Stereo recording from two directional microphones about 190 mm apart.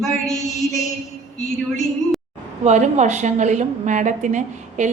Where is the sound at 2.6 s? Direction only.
40° right (ahead or behind).